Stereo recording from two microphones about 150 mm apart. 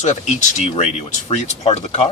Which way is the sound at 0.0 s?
50° left (ahead or behind).